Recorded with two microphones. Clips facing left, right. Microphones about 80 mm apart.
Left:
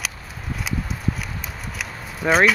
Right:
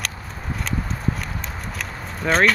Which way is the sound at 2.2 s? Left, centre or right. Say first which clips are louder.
Left 1 dB; centre.